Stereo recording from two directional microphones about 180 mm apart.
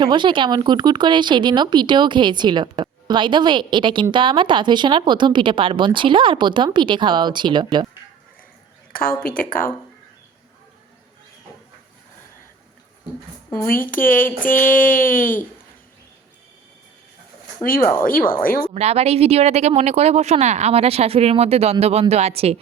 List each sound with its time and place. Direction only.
0.0 s speech: 25° right (ahead or behind)
8.9 s a sound: 50° left (ahead or behind)
9.2 s speech: 50° left (ahead or behind)
13.9 s speech: 50° left (ahead or behind)
17.6 s speech: 50° left (ahead or behind)
18.7 s speech: 35° right (ahead or behind)